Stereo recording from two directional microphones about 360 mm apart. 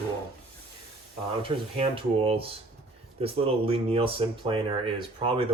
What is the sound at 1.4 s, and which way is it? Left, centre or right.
Speech, centre.